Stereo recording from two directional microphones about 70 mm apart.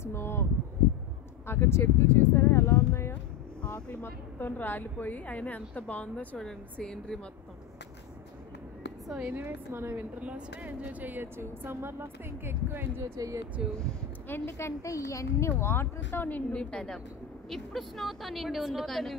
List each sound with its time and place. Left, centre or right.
0.0 s a sound: left
1.5 s a woman's voice: left
3.6 s boat: left
4.0 s a woman's voice: left; by 7.2 s centre
9.2 s speech: right
10.2 s speech: centre
11.3 s speech: right
13.6 s speech: centre
14.2 s a woman's voice: left; by 19.1 s centre